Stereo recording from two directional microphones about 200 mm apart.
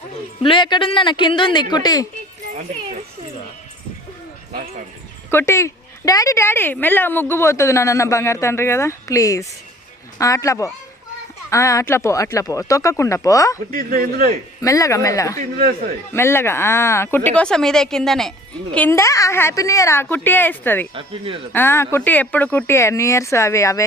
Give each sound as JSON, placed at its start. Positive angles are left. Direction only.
{"t": 0.4, "sound": "speech", "side_deg": 25}
{"t": 5.3, "sound": "speech", "side_deg": 10}
{"t": 13.7, "sound": "speech", "side_deg": -45}
{"t": 14.6, "sound": "speech", "side_deg": 15}
{"t": 15.4, "sound": "speech", "side_deg": -40}
{"t": 16.1, "sound": "speech", "side_deg": 10}
{"t": 20.9, "sound": "speech", "side_deg": -25}
{"t": 21.5, "sound": "speech", "side_deg": 10}